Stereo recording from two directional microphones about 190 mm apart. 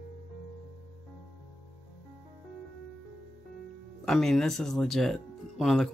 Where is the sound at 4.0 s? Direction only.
Centre (ahead or behind).